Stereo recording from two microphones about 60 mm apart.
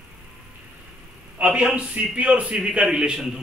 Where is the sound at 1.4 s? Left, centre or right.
Centre.